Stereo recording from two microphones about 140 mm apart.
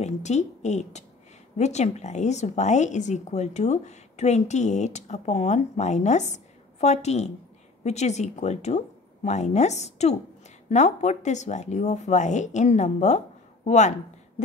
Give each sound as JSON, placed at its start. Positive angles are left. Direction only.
{"t": 0.0, "sound": "a woman's voice", "side_deg": 55}